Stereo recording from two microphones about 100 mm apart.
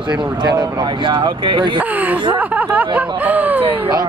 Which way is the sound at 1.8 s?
15° right (ahead or behind).